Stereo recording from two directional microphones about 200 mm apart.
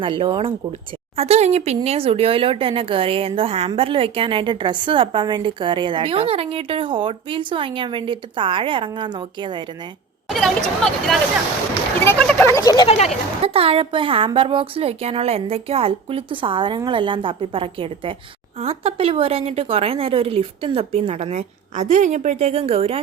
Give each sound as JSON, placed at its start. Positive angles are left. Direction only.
{"t": 0.0, "sound": "speech", "side_deg": -25}
{"t": 10.2, "sound": "speech", "side_deg": 0}
{"t": 12.9, "sound": "speech", "side_deg": 35}
{"t": 13.4, "sound": "speech", "side_deg": -30}